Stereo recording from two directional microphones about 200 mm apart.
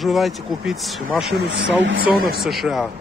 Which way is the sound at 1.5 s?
55° right (ahead or behind).